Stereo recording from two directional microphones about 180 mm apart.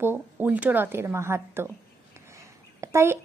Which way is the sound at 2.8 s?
15° right (ahead or behind).